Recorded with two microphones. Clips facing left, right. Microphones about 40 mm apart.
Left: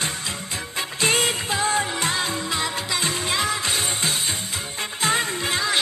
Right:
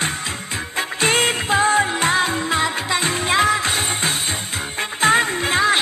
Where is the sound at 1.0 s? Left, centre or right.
Right.